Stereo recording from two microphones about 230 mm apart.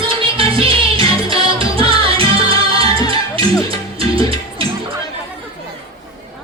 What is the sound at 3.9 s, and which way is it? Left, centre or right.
Music, right.